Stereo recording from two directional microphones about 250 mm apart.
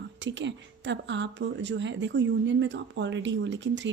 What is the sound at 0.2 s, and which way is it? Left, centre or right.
A woman's voice, right.